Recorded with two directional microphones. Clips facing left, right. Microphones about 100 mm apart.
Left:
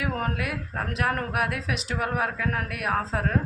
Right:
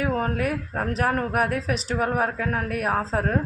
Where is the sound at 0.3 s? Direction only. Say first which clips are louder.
Right 5 dB; 40° right (ahead or behind).